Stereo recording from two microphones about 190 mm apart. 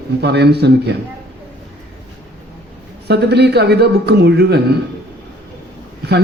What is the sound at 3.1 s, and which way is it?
A man's voice, 60° right (ahead or behind).